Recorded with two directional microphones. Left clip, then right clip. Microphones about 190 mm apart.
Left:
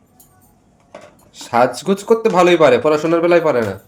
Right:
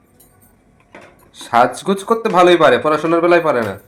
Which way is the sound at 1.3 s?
25° left (ahead or behind).